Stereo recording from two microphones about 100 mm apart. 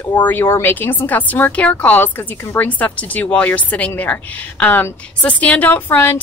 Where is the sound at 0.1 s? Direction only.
20° left (ahead or behind).